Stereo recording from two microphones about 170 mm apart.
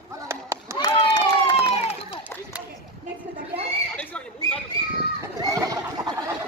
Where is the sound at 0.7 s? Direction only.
25° left (ahead or behind).